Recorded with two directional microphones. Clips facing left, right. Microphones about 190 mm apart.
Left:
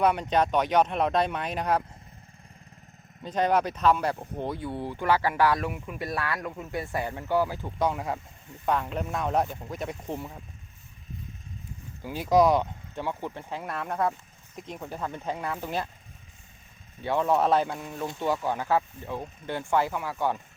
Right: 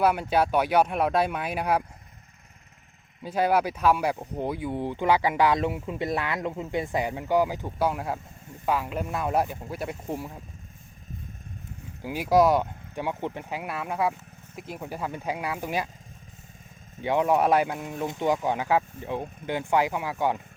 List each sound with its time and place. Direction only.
0.0 s speech: 5° right (ahead or behind)
3.2 s speech: 10° right (ahead or behind)
7.9 s speech: centre (ahead or behind)
12.0 s speech: 10° right (ahead or behind)
12.9 s speech: 15° right (ahead or behind)
17.0 s speech: 15° right (ahead or behind)